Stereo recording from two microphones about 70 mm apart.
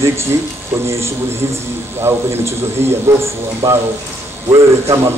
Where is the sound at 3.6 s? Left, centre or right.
Right.